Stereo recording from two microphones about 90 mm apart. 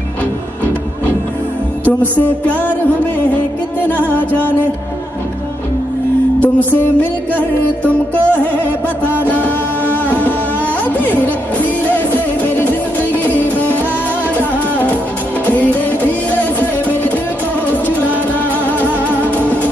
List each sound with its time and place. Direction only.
1.9 s speech: 20° left (ahead or behind)
6.4 s music: 20° left (ahead or behind)
18.9 s music: 20° left (ahead or behind)